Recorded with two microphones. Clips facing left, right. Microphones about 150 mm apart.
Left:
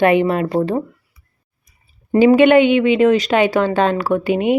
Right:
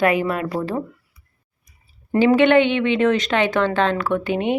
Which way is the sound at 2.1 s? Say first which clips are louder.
Left 4 dB; 15° left (ahead or behind).